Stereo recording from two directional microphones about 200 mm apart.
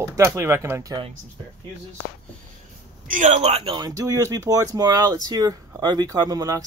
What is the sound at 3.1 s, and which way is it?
Speech, 35° right (ahead or behind).